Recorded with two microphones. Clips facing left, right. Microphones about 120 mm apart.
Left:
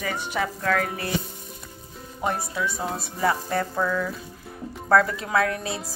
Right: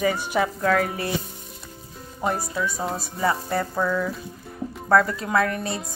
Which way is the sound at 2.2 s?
Centre (ahead or behind).